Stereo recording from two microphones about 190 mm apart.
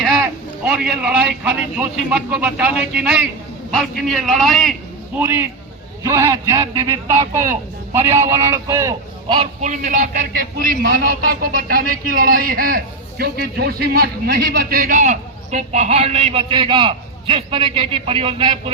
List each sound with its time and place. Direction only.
0.0 s a man's voice: centre (ahead or behind)
5.1 s a man's voice: 10° right (ahead or behind)
9.2 s a man's voice: 30° right (ahead or behind)